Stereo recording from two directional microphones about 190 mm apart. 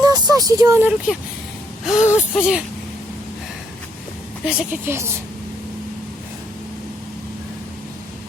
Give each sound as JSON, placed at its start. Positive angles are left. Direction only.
{"t": 0.0, "sound": "speech", "side_deg": -20}
{"t": 4.4, "sound": "a woman's voice", "side_deg": -5}